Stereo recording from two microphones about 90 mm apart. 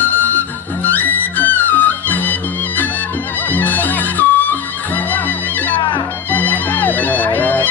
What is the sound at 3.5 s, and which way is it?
Music, 20° left (ahead or behind).